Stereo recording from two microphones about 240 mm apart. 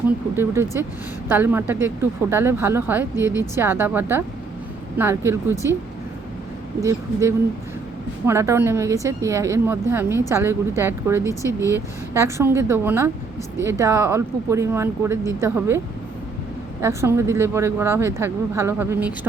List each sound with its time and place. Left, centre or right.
0.3 s a woman's voice: centre
6.8 s a woman's voice: centre
16.8 s a woman's voice: centre